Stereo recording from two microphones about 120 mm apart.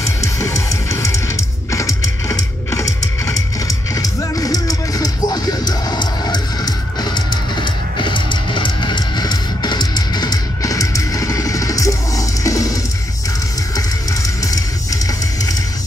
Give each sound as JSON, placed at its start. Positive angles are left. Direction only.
{"t": 0.0, "sound": "music", "side_deg": 25}
{"t": 14.4, "sound": "music", "side_deg": 30}